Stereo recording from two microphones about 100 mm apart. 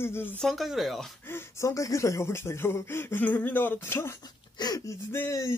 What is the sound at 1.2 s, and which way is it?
Speech, 25° left (ahead or behind).